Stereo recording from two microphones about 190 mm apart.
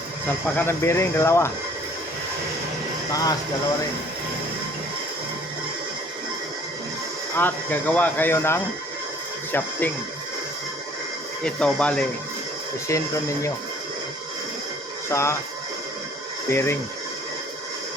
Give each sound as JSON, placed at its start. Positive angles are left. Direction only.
{"t": 0.5, "sound": "speech", "side_deg": 10}
{"t": 3.1, "sound": "speech", "side_deg": 20}
{"t": 7.3, "sound": "speech", "side_deg": 10}
{"t": 11.4, "sound": "speech", "side_deg": 5}
{"t": 12.9, "sound": "speech", "side_deg": 15}
{"t": 15.1, "sound": "speech", "side_deg": 15}
{"t": 16.5, "sound": "speech", "side_deg": 15}